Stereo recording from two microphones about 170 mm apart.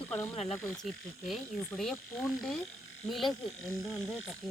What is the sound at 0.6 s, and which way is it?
Speech, 10° left (ahead or behind).